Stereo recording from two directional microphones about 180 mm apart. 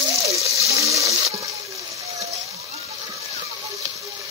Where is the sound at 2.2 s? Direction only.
35° right (ahead or behind).